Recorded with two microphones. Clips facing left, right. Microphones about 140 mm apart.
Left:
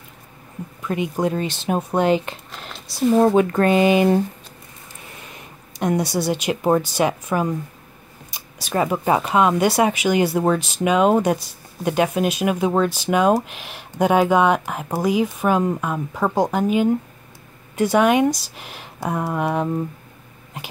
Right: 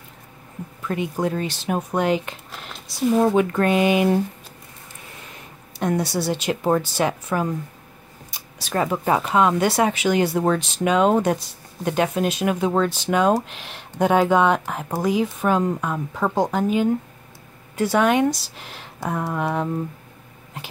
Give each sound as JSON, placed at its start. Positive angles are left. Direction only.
{"t": 0.8, "sound": "speech", "side_deg": 15}
{"t": 5.8, "sound": "speech", "side_deg": 15}